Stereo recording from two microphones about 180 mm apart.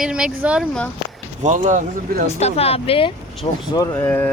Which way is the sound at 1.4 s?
45° right (ahead or behind).